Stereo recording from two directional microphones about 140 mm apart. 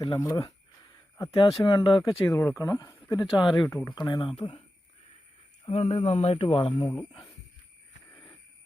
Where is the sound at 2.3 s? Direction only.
15° left (ahead or behind).